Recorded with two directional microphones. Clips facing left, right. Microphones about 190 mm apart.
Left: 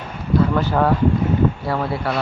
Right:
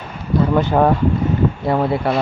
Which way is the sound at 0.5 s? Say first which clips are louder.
Right 3 dB; 20° right (ahead or behind).